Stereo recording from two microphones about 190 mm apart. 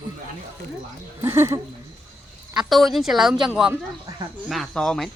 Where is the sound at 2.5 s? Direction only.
Centre (ahead or behind).